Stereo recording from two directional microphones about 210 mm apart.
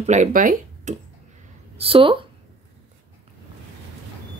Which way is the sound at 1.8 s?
25° right (ahead or behind).